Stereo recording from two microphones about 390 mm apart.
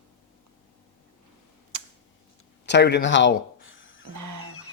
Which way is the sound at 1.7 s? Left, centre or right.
Right.